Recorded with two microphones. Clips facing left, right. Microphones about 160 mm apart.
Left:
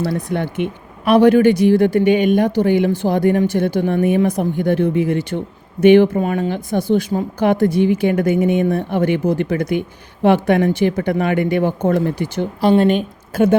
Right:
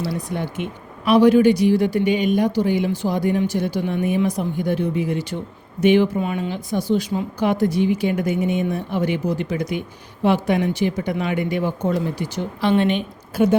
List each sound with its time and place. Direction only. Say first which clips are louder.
0.0 s speech: left 5 dB; 55° left (ahead or behind)
12.6 s a woman's voice: left 5 dB; 40° left (ahead or behind)